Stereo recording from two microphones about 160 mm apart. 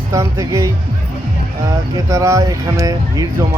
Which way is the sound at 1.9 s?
20° right (ahead or behind).